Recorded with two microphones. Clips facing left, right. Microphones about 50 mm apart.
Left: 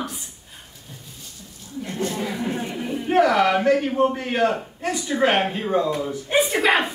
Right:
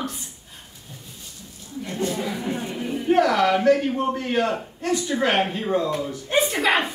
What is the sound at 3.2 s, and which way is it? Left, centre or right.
Speech, centre.